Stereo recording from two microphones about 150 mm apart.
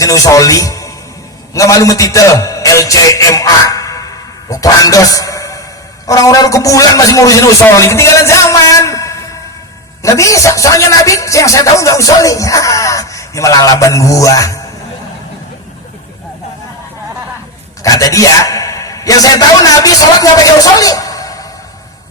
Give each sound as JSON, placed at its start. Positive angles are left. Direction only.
{"t": 0.0, "sound": "speech", "side_deg": 20}
{"t": 1.5, "sound": "music", "side_deg": 20}
{"t": 6.1, "sound": "speech", "side_deg": 20}
{"t": 17.8, "sound": "a man's voice", "side_deg": 20}